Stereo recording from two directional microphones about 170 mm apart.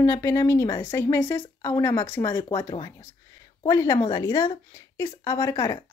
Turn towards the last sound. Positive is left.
turn(degrees=20)  # may be behind; listen again after turning